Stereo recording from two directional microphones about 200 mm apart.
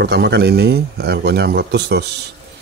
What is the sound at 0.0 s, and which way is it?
Speech, 55° right (ahead or behind).